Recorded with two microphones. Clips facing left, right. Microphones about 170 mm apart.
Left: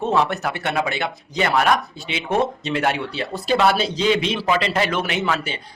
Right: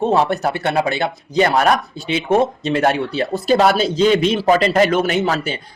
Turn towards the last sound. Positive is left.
turn(degrees=-40)  # may be behind; listen again after turning